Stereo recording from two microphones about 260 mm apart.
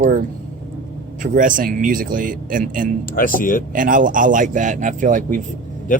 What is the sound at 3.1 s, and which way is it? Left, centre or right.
Speech, left.